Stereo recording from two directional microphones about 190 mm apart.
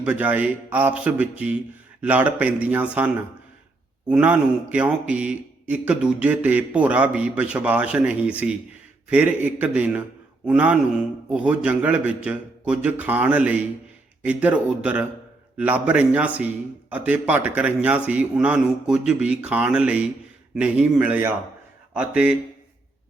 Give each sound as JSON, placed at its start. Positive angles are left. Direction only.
{"t": 0.0, "sound": "a man's voice", "side_deg": -10}